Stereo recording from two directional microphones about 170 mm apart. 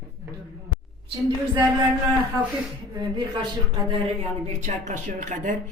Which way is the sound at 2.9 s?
25° right (ahead or behind).